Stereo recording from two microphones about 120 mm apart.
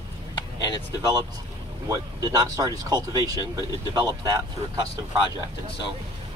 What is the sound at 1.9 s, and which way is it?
Speech, 35° right (ahead or behind).